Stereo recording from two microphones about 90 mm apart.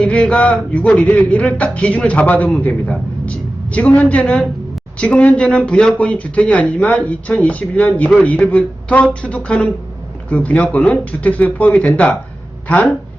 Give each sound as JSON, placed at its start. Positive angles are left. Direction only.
{"t": 0.0, "sound": "speech", "side_deg": 10}